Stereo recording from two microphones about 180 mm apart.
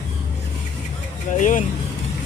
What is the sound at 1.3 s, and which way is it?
Speech, 45° left (ahead or behind).